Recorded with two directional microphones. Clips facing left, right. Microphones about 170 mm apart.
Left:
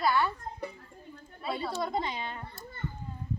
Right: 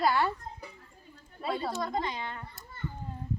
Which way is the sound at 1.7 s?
10° left (ahead or behind).